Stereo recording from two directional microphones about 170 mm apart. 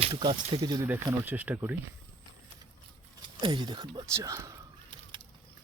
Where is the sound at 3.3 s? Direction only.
25° right (ahead or behind).